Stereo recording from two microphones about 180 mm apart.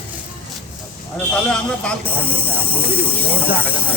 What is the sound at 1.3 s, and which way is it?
Speech, 5° left (ahead or behind).